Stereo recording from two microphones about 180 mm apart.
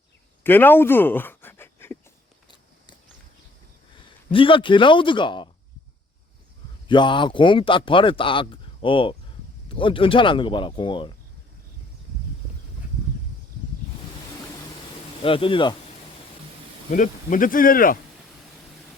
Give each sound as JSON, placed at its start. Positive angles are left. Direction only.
{"t": 0.4, "sound": "a sound", "side_deg": 10}
{"t": 3.9, "sound": "a man's voice", "side_deg": 30}
{"t": 6.8, "sound": "speech", "side_deg": 25}
{"t": 15.2, "sound": "speech", "side_deg": 30}
{"t": 16.9, "sound": "speech", "side_deg": 50}